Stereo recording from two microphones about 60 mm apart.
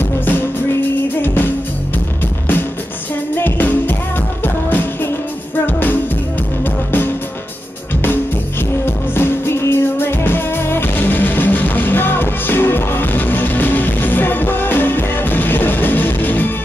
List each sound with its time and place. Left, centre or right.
0.0 s music: left
3.3 s music: left
8.8 s music: left